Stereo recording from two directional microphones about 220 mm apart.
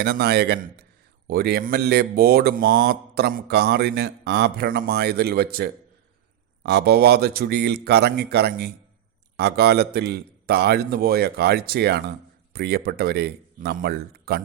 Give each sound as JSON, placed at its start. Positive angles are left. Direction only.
{"t": 0.0, "sound": "speech", "side_deg": -45}